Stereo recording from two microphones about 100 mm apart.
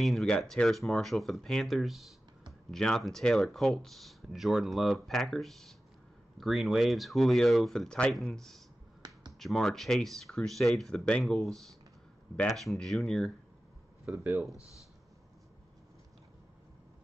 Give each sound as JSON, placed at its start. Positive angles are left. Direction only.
{"t": 0.0, "sound": "speech", "side_deg": 0}
{"t": 14.1, "sound": "speech", "side_deg": -15}